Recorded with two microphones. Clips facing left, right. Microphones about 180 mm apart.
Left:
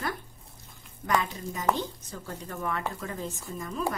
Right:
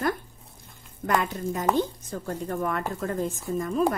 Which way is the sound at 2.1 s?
50° right (ahead or behind).